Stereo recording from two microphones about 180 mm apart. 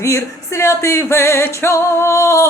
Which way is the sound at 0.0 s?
15° left (ahead or behind).